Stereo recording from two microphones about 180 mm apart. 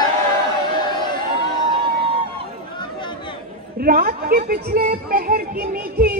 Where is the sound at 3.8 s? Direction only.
55° right (ahead or behind).